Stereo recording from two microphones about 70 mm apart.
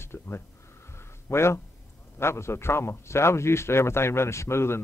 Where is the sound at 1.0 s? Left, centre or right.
Left.